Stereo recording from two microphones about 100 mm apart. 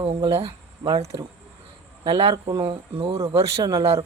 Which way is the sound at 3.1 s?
30° right (ahead or behind).